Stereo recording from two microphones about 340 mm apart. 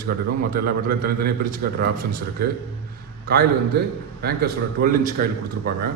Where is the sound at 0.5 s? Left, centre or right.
Right.